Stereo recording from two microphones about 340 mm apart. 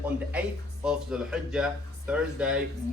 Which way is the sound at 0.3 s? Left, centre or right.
Centre.